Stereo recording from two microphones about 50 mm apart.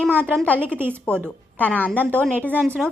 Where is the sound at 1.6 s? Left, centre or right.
Left.